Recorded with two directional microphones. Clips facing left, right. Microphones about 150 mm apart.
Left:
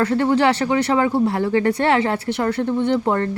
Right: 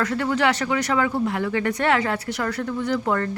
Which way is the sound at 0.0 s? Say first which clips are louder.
Left 5 dB; 30° left (ahead or behind).